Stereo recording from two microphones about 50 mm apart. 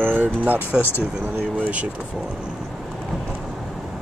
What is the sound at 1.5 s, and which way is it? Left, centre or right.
Speech, right.